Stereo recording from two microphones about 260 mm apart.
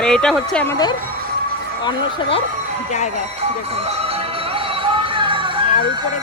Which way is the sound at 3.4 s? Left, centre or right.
Right.